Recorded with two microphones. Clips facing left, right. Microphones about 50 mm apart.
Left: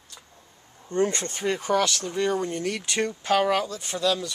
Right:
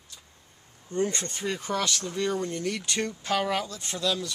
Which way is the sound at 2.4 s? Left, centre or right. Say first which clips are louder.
Left 2 dB; left.